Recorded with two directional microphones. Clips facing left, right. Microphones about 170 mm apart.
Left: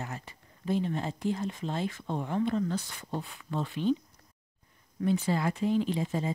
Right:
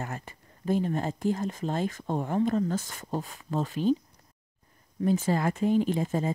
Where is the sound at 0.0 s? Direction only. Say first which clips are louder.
Right 3 dB; 50° right (ahead or behind).